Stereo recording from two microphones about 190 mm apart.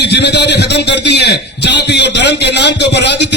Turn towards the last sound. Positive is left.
turn(degrees=60)  # may be behind; listen again after turning